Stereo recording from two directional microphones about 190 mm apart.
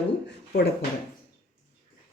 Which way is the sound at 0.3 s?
60° left (ahead or behind).